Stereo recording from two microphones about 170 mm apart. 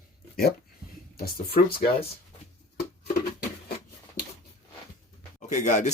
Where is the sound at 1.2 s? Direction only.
60° left (ahead or behind).